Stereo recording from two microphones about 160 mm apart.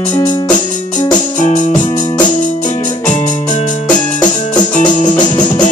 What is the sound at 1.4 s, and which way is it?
Music, 50° left (ahead or behind).